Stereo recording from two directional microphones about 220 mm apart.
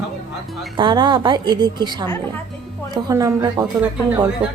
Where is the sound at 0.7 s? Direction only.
20° right (ahead or behind).